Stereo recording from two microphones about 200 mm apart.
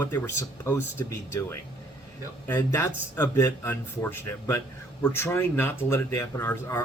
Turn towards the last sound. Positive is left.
turn(degrees=10)  # may be behind; listen again after turning